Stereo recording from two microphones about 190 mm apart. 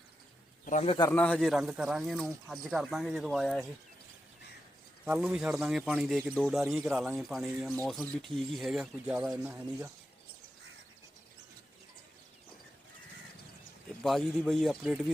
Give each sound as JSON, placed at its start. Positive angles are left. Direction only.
{"t": 0.6, "sound": "speech", "side_deg": 40}
{"t": 1.1, "sound": "speech", "side_deg": 5}
{"t": 5.0, "sound": "speech", "side_deg": -5}
{"t": 14.0, "sound": "speech", "side_deg": 0}